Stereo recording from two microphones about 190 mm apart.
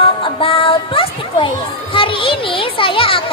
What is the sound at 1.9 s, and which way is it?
Children playing, 30° left (ahead or behind).